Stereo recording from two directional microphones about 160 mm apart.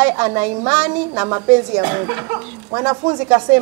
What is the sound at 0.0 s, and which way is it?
Speech, 20° right (ahead or behind).